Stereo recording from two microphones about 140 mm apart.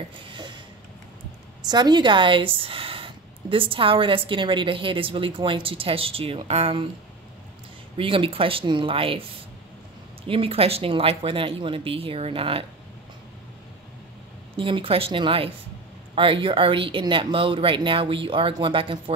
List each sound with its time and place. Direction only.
0.2 s a sound: 35° right (ahead or behind)
1.7 s a woman's voice: 30° right (ahead or behind)
8.0 s a woman's voice: 40° right (ahead or behind)
10.2 s a woman's voice: 40° right (ahead or behind)
14.6 s a woman's voice: 40° right (ahead or behind)